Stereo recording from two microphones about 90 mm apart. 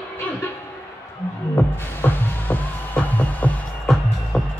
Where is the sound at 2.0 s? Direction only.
20° left (ahead or behind).